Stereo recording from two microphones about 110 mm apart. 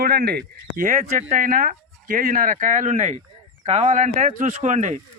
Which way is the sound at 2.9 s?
90° right.